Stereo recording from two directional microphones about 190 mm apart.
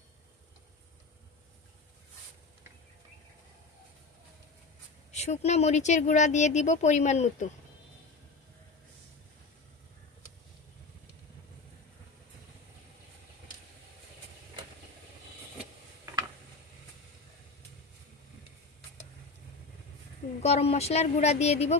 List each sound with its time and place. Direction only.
5.1 s speech: 35° left (ahead or behind)
20.4 s speech: 35° left (ahead or behind)